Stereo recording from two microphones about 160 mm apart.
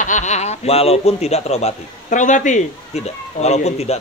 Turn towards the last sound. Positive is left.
turn(degrees=45)  # may be behind; listen again after turning